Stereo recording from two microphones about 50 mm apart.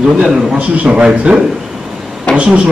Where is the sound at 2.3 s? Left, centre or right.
Left.